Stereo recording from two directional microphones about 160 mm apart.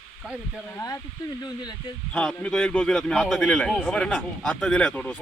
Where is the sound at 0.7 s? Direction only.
20° left (ahead or behind).